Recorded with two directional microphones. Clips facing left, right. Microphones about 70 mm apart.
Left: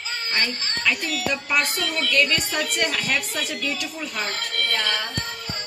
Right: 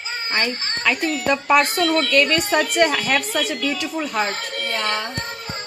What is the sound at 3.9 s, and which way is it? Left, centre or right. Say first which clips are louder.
Speech: right 6 dB; right.